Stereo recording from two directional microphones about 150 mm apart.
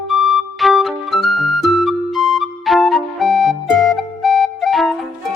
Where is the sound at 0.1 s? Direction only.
Centre (ahead or behind).